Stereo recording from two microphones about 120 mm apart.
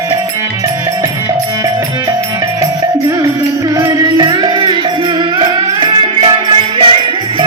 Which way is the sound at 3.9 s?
35° right (ahead or behind).